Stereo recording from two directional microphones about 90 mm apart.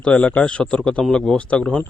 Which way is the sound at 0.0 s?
10° left (ahead or behind).